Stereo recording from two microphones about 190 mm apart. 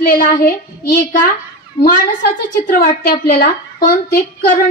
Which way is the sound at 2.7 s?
55° left (ahead or behind).